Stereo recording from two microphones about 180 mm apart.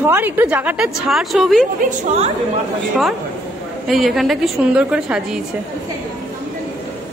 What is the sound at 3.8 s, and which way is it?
A woman's voice, centre (ahead or behind).